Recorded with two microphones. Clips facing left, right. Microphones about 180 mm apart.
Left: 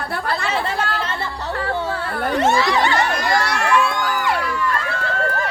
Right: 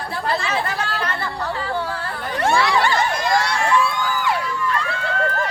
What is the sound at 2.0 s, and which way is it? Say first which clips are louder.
Children playing: left 5 dB; 60° left (ahead or behind).